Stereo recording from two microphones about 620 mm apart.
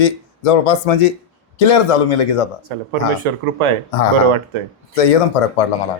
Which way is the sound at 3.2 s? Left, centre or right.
Right.